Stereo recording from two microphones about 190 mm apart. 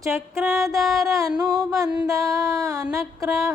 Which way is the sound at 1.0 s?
15° right (ahead or behind).